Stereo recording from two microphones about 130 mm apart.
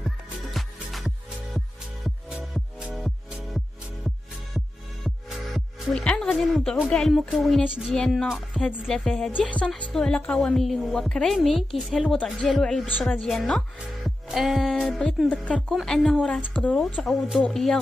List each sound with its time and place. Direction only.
0.5 s music: centre (ahead or behind)
6.2 s a woman's voice: centre (ahead or behind)
17.0 s speech: centre (ahead or behind)